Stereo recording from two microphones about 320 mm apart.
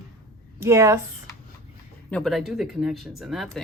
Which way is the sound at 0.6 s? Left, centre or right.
Centre.